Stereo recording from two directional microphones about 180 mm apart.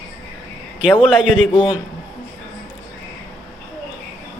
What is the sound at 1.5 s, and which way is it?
Speech, 25° left (ahead or behind).